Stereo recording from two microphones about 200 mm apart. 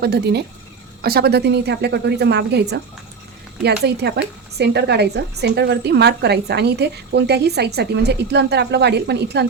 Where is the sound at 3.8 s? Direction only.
55° right (ahead or behind).